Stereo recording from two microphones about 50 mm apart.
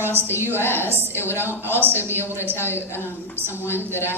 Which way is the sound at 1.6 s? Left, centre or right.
Right.